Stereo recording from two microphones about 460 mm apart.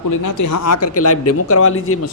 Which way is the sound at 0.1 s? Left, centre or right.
Left.